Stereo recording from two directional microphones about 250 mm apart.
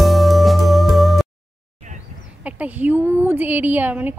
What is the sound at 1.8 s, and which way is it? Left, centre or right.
Bird, right.